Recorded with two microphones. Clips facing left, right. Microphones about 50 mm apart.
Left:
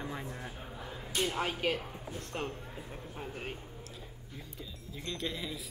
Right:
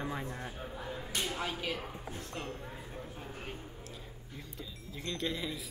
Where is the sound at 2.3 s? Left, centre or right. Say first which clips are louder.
Left 5 dB; left.